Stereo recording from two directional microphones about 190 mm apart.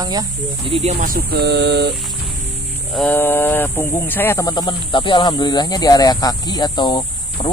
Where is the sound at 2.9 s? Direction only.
10° left (ahead or behind).